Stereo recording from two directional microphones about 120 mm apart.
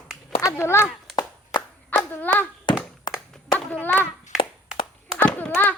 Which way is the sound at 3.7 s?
15° left (ahead or behind).